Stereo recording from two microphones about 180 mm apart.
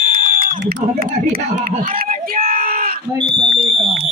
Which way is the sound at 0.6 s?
55° right (ahead or behind).